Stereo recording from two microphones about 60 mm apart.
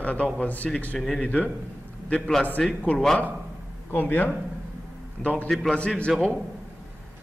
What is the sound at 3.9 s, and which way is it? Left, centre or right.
Speech, left.